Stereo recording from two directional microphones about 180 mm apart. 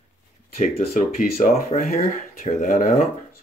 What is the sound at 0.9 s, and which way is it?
Speech, 50° left (ahead or behind).